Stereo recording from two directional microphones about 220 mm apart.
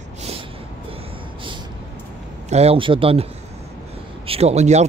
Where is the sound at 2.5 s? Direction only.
25° right (ahead or behind).